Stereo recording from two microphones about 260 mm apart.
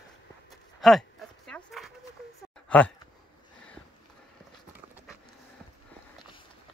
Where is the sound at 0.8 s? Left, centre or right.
Centre.